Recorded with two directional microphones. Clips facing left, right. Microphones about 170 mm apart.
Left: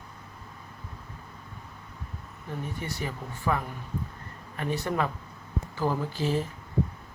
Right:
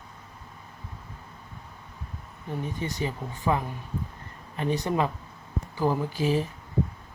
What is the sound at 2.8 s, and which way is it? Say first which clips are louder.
Speech: right 4 dB; 20° right (ahead or behind).